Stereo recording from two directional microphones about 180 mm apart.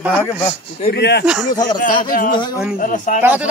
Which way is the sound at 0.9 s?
65° left (ahead or behind).